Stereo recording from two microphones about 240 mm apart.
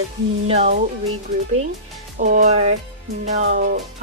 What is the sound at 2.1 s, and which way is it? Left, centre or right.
Speech, right.